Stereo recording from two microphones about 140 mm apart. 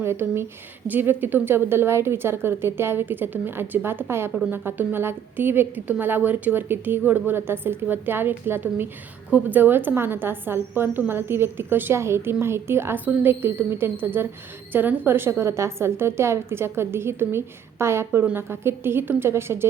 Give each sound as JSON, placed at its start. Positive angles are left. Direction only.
{"t": 0.0, "sound": "a woman's voice", "side_deg": -15}